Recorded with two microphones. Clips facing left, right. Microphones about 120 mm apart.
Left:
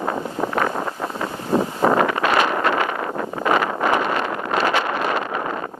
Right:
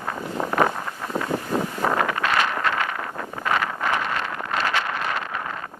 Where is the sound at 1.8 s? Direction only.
35° left (ahead or behind).